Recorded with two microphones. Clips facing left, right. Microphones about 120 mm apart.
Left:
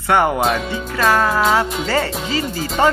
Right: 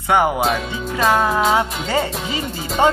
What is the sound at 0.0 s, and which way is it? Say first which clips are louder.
Speech: left 1 dB; 15° right (ahead or behind).